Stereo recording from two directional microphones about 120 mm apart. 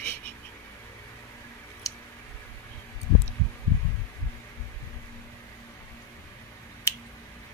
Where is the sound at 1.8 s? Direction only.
30° left (ahead or behind).